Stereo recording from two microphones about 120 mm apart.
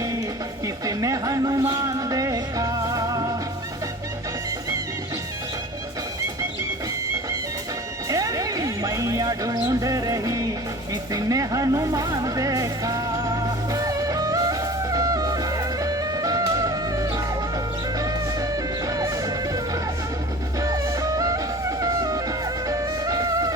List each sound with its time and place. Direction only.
0.9 s music: 30° right (ahead or behind)
8.1 s a sound: 30° right (ahead or behind)
11.1 s music: 30° right (ahead or behind)
20.6 s music: 30° right (ahead or behind)